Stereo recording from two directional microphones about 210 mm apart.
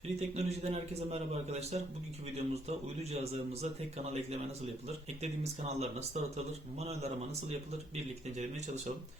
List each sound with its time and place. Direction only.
0.2 s speech: 30° right (ahead or behind)